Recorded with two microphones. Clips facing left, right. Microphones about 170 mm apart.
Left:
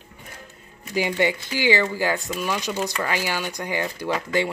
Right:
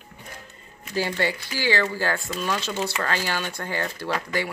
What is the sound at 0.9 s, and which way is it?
Speech, 15° left (ahead or behind).